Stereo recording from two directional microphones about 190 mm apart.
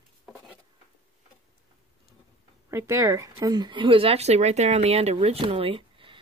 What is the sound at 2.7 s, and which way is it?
Speech, 15° right (ahead or behind).